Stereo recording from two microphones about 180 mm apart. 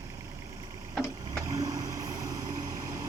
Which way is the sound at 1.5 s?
20° right (ahead or behind).